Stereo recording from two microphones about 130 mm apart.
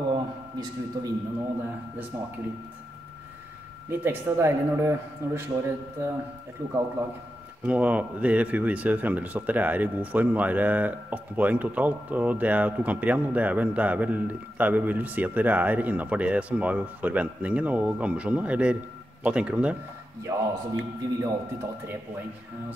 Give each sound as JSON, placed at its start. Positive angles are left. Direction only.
{"t": 0.1, "sound": "a sound", "side_deg": -30}
{"t": 2.1, "sound": "speech", "side_deg": -20}
{"t": 3.9, "sound": "speech", "side_deg": -15}
{"t": 7.6, "sound": "speech", "side_deg": -10}
{"t": 20.3, "sound": "speech", "side_deg": -25}